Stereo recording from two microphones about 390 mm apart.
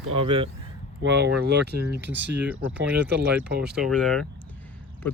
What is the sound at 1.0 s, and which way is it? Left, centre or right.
Speech, right.